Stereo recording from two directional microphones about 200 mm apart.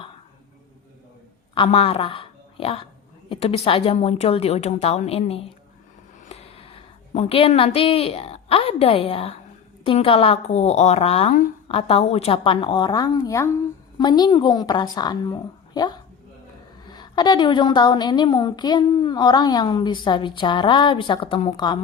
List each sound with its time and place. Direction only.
1.5 s a woman's voice: 30° left (ahead or behind)
6.3 s a sound: 30° left (ahead or behind)
7.1 s a woman's voice: 30° left (ahead or behind)